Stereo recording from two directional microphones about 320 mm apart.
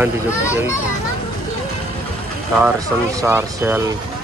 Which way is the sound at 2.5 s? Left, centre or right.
Centre.